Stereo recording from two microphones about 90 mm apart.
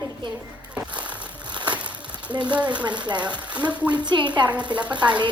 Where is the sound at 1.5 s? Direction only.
55° right (ahead or behind).